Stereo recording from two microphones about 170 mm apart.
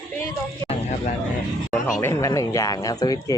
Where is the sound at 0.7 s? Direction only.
45° left (ahead or behind).